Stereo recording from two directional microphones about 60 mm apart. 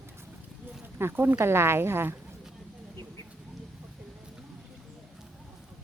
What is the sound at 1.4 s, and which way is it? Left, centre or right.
Speech, right.